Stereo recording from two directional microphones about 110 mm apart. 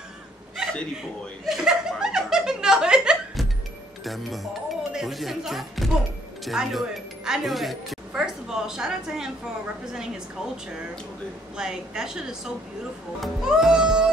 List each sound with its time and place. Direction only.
1.4 s snicker: 5° right (ahead or behind)
4.0 s speech: centre (ahead or behind)
11.5 s a woman's voice: 5° right (ahead or behind)